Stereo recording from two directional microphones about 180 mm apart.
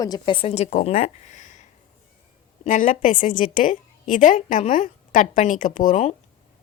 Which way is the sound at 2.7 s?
45° left (ahead or behind).